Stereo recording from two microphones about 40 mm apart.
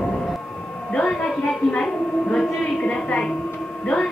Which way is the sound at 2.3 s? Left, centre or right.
Left.